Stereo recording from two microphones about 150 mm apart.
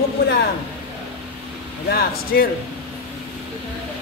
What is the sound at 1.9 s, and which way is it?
Speech, 85° left.